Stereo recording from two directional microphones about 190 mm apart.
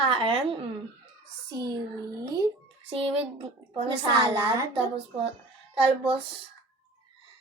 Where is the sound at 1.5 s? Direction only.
20° right (ahead or behind).